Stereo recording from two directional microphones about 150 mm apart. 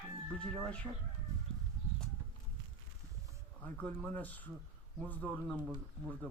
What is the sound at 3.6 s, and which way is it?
Speech, 10° left (ahead or behind).